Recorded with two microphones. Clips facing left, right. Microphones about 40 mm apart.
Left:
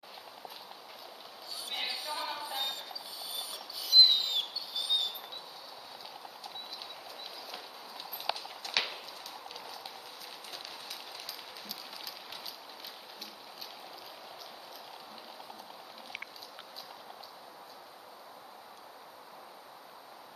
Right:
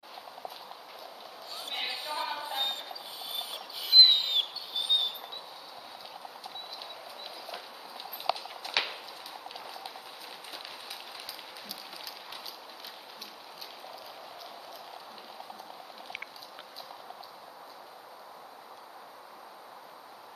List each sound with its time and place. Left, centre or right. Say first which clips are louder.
1.7 s basketball bounce: right 2 dB; right
2.4 s rodents: right 3 dB; right
7.5 s clip-clop: right 2 dB; centre
8.6 s a sound: right 2 dB; centre